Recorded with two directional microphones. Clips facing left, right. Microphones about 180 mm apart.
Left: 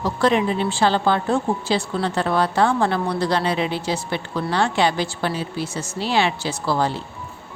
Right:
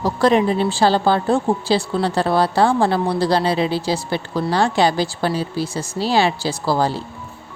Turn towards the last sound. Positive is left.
turn(degrees=-35)  # may be behind; listen again after turning